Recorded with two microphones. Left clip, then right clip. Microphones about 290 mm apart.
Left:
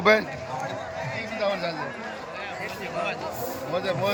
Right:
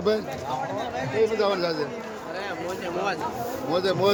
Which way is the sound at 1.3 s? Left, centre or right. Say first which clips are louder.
Right 3 dB; centre.